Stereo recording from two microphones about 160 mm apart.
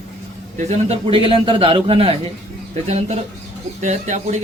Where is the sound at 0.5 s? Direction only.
40° right (ahead or behind).